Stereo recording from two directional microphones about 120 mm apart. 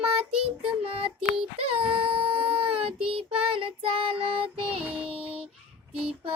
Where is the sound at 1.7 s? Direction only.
50° right (ahead or behind).